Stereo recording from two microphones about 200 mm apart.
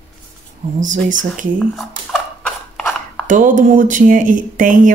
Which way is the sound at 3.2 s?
40° right (ahead or behind).